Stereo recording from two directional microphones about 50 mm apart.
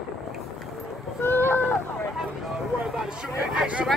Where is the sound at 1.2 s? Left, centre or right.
Left.